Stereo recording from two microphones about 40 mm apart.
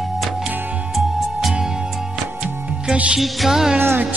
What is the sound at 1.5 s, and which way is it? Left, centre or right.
Music, centre.